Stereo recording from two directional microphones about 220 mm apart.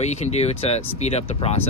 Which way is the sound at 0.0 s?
30° left (ahead or behind).